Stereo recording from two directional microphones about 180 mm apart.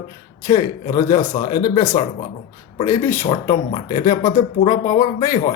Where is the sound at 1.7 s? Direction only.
20° left (ahead or behind).